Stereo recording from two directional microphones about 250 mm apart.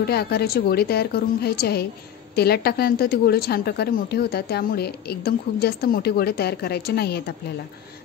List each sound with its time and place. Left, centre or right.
0.0 s a woman's voice: left